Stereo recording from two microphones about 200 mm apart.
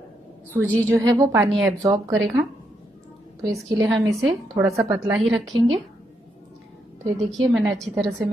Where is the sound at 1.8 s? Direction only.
15° right (ahead or behind).